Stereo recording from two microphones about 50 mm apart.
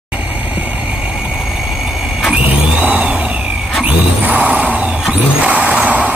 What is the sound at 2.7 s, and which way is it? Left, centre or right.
Vehicle, right.